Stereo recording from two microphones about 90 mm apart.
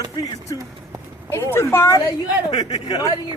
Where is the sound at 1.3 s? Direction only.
25° left (ahead or behind).